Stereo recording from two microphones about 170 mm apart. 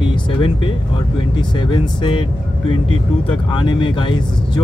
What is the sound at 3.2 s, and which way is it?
Speech, 25° left (ahead or behind).